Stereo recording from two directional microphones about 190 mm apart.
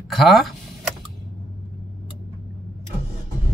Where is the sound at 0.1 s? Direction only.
Centre (ahead or behind).